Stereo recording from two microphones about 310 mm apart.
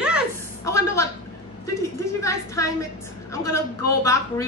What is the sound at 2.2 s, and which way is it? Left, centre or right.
A woman's voice, centre.